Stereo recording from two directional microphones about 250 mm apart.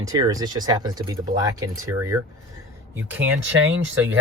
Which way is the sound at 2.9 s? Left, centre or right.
Centre.